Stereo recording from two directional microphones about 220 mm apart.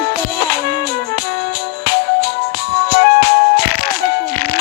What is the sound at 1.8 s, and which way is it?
Music, 45° left (ahead or behind).